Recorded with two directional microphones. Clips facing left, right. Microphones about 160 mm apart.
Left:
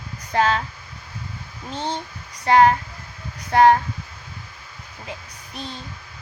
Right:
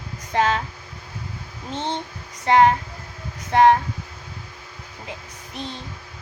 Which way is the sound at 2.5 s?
20° right (ahead or behind).